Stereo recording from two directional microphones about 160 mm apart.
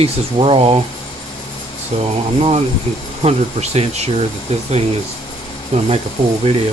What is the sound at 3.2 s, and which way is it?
Speech, 40° right (ahead or behind).